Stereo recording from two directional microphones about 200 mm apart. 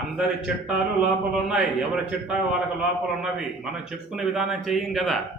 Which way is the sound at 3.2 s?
5° right (ahead or behind).